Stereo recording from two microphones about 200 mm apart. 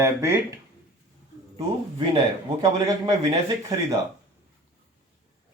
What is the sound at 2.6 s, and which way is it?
Speech, 20° right (ahead or behind).